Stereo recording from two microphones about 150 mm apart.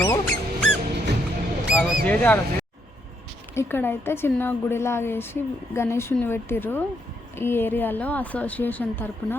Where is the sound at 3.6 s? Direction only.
15° left (ahead or behind).